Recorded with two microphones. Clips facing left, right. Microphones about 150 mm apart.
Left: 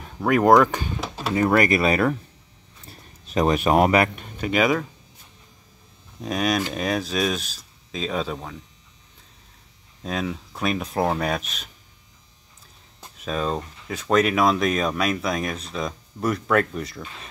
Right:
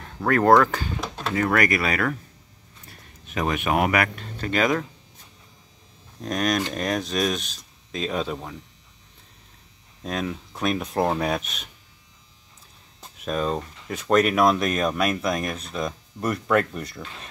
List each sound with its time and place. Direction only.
0.0 s speech: 10° left (ahead or behind)
1.0 s a sound: 5° left (ahead or behind)
1.3 s speech: 25° left (ahead or behind); by 4.8 s 10° left (ahead or behind)
6.2 s speech: 5° left (ahead or behind)
10.0 s speech: centre (ahead or behind)
13.2 s speech: centre (ahead or behind)